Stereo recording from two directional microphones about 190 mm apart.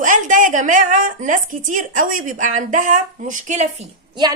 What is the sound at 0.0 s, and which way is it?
A woman's voice, 45° right (ahead or behind).